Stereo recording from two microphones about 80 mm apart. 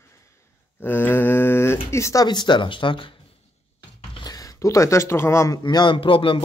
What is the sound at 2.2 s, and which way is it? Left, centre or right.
Speech, left.